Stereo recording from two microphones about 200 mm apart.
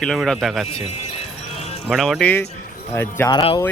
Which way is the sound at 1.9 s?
Centre (ahead or behind).